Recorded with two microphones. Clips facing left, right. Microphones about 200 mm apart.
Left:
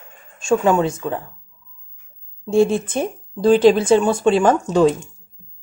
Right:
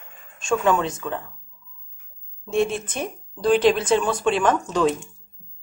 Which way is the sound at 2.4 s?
30° left (ahead or behind).